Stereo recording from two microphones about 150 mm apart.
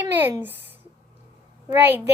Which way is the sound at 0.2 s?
15° right (ahead or behind).